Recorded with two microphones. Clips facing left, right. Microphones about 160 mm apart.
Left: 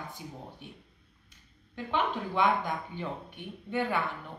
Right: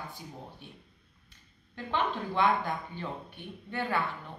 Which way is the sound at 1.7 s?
10° left (ahead or behind).